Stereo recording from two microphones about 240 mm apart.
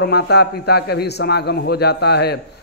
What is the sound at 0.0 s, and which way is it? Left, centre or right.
A man's voice, left.